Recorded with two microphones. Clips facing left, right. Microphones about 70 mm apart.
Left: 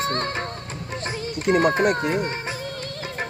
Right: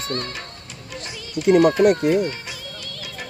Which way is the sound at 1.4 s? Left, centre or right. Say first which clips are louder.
Right 5 dB; left.